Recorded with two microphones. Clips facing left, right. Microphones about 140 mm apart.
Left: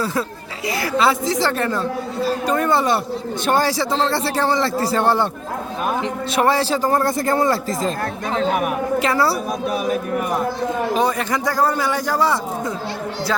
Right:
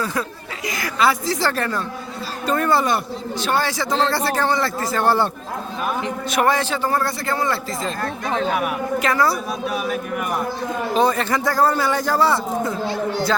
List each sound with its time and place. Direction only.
0.0 s a man's voice: 25° left (ahead or behind)
3.4 s a man's voice: 40° left (ahead or behind)
3.9 s a man's voice: 25° left (ahead or behind)
5.0 s a man's voice: 20° left (ahead or behind)
6.3 s a man's voice: 30° left (ahead or behind)
9.0 s a man's voice: 30° left (ahead or behind)
10.9 s a man's voice: 15° left (ahead or behind)